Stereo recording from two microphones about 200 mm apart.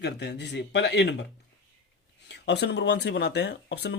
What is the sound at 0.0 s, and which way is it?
Speech, 55° left (ahead or behind).